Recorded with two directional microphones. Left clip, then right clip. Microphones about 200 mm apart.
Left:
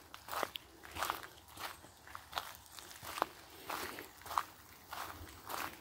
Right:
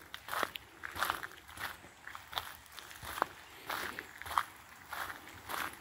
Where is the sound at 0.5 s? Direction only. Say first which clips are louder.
Right 1 dB; 15° left (ahead or behind).